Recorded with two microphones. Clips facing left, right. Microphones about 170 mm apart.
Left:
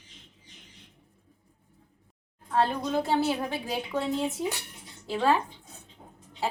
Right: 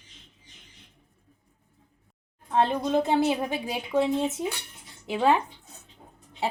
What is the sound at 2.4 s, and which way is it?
A woman's voice, 20° right (ahead or behind).